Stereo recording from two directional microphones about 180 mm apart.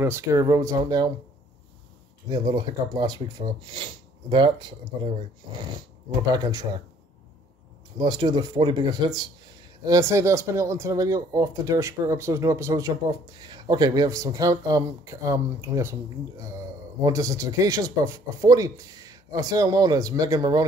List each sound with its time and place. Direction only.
0.0 s speech: 15° right (ahead or behind)
2.2 s speech: 25° right (ahead or behind)
8.0 s speech: 25° right (ahead or behind)